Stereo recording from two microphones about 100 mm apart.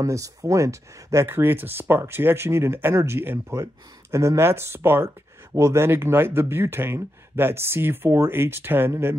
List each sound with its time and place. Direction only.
0.0 s speech: 35° right (ahead or behind)
1.2 s speech: 20° right (ahead or behind)